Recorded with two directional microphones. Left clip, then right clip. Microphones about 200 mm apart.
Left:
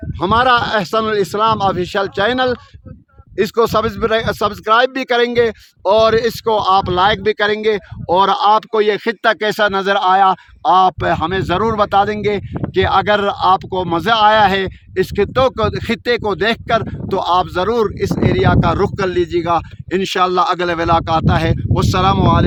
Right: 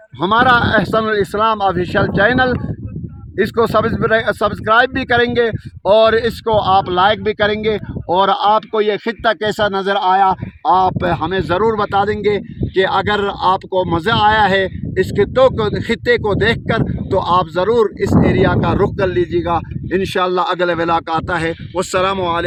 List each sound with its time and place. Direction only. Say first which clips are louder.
0.2 s speech: right 1 dB; 45° right (ahead or behind); by 21.3 s 15° left (ahead or behind)